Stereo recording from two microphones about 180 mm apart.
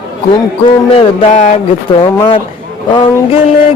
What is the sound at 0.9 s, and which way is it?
Music, 35° left (ahead or behind).